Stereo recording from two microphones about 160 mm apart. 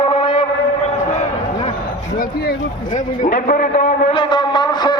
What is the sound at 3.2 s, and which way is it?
Speech, 60° left (ahead or behind).